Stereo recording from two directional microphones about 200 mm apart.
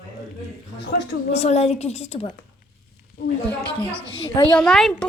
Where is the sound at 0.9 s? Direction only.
50° left (ahead or behind).